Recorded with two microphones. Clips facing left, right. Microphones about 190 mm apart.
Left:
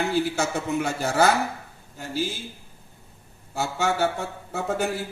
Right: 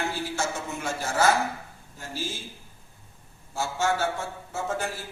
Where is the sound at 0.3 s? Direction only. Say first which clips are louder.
Left 6 dB; 65° left (ahead or behind).